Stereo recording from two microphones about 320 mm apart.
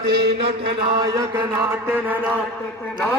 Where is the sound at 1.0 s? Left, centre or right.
Centre.